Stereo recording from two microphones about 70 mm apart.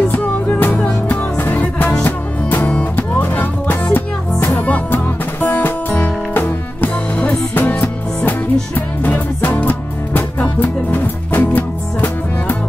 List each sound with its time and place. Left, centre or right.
0.1 s music: left